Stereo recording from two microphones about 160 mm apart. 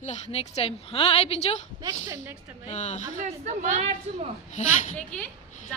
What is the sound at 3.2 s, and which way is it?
Speech, 45° right (ahead or behind).